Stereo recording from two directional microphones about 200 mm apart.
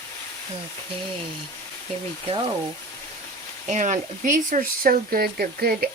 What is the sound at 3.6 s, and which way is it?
Speech, 40° right (ahead or behind).